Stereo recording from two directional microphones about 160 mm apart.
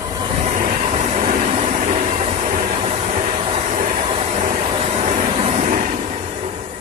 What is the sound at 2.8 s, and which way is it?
Vehicle, 40° right (ahead or behind).